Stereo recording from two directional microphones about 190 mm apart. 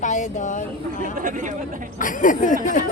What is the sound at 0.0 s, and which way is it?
Speech, 40° left (ahead or behind).